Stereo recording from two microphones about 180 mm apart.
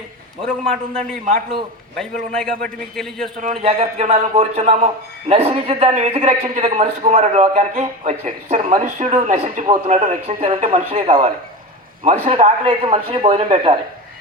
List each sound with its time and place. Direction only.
0.4 s a man's voice: centre (ahead or behind)
3.6 s a man's voice: 35° right (ahead or behind)